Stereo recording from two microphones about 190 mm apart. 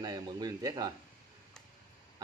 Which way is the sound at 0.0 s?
20° right (ahead or behind).